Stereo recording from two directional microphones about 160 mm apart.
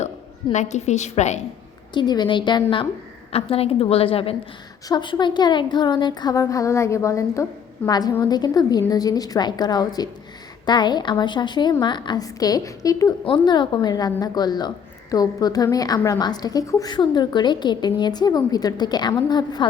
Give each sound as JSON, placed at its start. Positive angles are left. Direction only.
{"t": 0.5, "sound": "a woman's voice", "side_deg": 45}
{"t": 1.9, "sound": "a woman's voice", "side_deg": 25}